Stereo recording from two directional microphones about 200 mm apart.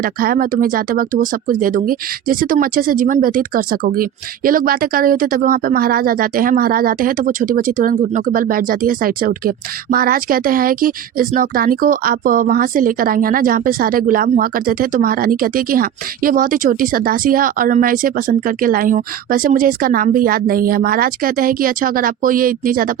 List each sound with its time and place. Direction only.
0.0 s speech: 45° right (ahead or behind)